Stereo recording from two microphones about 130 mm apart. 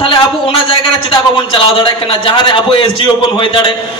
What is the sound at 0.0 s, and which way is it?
A man's voice, 40° left (ahead or behind).